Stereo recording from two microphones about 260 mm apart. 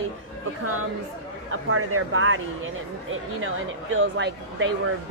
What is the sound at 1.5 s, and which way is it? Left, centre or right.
Speech, right.